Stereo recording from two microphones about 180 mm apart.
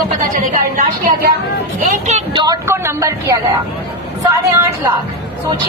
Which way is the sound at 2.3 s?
20° right (ahead or behind).